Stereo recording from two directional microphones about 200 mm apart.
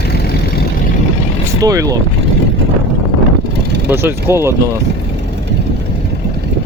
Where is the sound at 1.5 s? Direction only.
15° right (ahead or behind).